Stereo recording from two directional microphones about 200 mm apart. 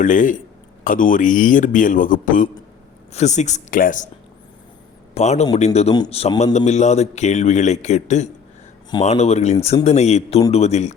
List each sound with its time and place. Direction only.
0.0 s a man's voice: 40° left (ahead or behind)
5.1 s a man's voice: 35° left (ahead or behind)